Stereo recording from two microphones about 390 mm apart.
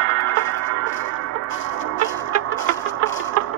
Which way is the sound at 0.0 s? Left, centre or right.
Right.